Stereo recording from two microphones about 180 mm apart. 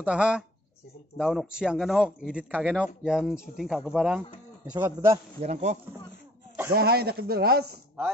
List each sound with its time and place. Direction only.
0.0 s speech: 5° right (ahead or behind)
5.1 s a man's voice: 35° right (ahead or behind)
6.7 s speech: 60° right (ahead or behind)